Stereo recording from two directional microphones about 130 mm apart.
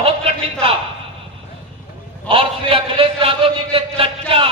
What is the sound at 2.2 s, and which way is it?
A man's voice, 45° right (ahead or behind).